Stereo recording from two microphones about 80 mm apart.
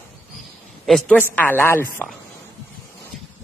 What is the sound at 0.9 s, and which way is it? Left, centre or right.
Speech, centre.